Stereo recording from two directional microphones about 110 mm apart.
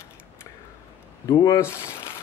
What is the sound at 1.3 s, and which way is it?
Speech, 40° left (ahead or behind).